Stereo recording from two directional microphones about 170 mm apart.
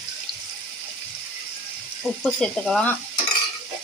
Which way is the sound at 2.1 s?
5° left (ahead or behind).